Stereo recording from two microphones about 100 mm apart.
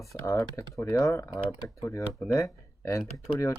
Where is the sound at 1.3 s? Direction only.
40° left (ahead or behind).